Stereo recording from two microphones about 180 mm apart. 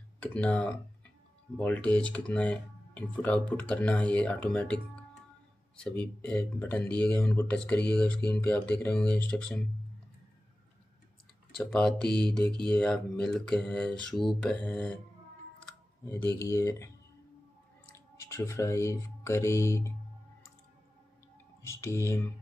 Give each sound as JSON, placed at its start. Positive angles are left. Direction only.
{"t": 0.2, "sound": "speech", "side_deg": 5}
{"t": 11.5, "sound": "mantra", "side_deg": 5}
{"t": 16.3, "sound": "speech", "side_deg": 15}
{"t": 17.9, "sound": "speech", "side_deg": 15}
{"t": 21.6, "sound": "speech", "side_deg": 15}